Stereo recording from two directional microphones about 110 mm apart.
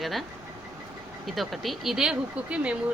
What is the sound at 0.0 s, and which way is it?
Speech, centre (ahead or behind).